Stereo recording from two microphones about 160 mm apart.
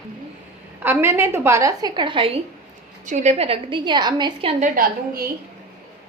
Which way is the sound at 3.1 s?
45° right (ahead or behind).